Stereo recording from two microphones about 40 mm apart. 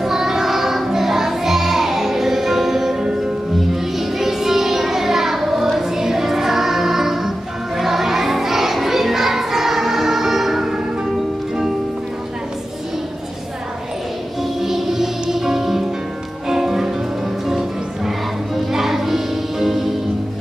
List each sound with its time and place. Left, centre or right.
0.0 s music: centre
14.4 s music: centre